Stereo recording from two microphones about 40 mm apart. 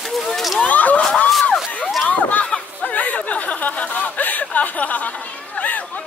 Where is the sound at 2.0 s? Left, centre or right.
Left.